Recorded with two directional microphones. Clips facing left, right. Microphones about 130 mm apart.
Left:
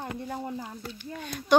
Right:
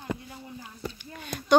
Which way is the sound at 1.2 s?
Centre (ahead or behind).